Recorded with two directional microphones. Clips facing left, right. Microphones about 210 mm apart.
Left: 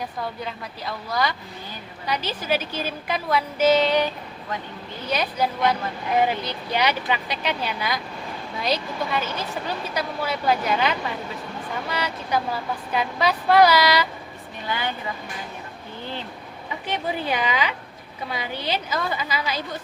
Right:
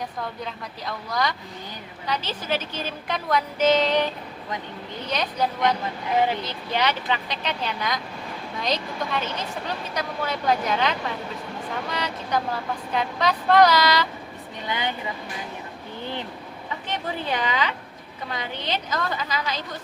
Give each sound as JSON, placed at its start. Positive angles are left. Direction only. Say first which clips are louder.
{"t": 0.4, "sound": "speech", "louder": "left 1 dB", "side_deg": 5}
{"t": 5.0, "sound": "speech", "louder": "left 2 dB", "side_deg": 10}
{"t": 14.7, "sound": "speech", "louder": "even", "side_deg": -20}
{"t": 16.8, "sound": "speech", "louder": "left 3 dB", "side_deg": 10}